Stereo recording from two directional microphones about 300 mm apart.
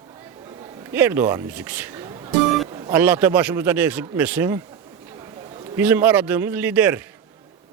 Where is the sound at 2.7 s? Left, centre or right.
Centre.